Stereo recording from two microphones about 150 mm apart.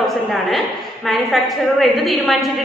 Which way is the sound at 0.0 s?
Centre (ahead or behind).